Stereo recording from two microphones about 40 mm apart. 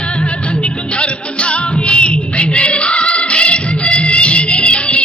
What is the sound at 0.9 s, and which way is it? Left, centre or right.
Music, left.